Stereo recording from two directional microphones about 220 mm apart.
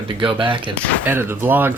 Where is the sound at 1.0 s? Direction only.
10° right (ahead or behind).